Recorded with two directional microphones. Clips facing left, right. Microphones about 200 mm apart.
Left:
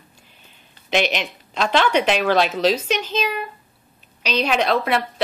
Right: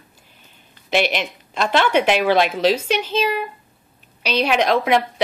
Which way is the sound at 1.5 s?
5° right (ahead or behind).